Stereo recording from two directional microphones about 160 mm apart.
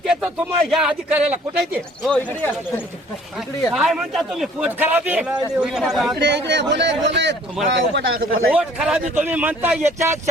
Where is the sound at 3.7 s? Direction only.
Centre (ahead or behind).